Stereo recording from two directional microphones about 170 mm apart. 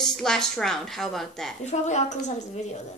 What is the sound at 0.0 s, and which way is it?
A woman's voice, 5° left (ahead or behind).